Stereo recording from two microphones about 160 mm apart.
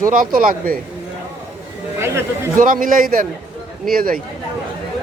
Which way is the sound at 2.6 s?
60° right (ahead or behind).